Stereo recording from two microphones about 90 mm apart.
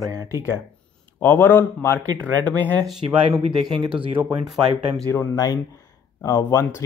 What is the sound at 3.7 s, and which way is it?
Speech, 65° right (ahead or behind).